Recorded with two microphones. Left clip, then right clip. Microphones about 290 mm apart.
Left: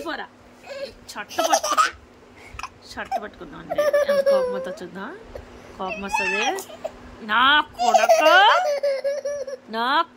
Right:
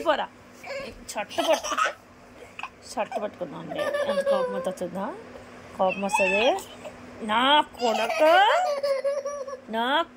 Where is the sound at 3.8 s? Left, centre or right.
Centre.